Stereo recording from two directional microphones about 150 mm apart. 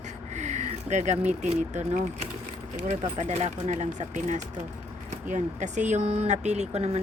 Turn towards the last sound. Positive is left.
turn(degrees=-45)  # may be behind; listen again after turning